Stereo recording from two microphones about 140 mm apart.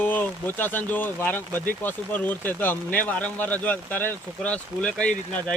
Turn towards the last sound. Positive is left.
turn(degrees=5)  # may be behind; listen again after turning